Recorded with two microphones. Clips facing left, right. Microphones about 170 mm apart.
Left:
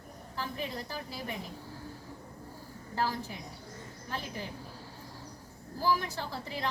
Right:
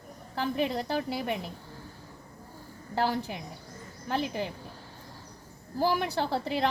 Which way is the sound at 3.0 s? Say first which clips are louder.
Right 5 dB; 75° right (ahead or behind).